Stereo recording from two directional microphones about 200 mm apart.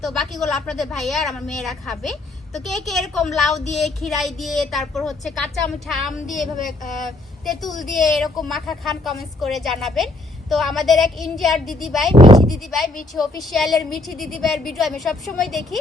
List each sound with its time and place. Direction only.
0.0 s a woman's voice: centre (ahead or behind)
12.1 s speech: 25° right (ahead or behind)
12.5 s a woman's voice: centre (ahead or behind)